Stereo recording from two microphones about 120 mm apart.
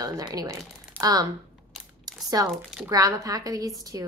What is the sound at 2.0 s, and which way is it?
Crumpling, 30° right (ahead or behind).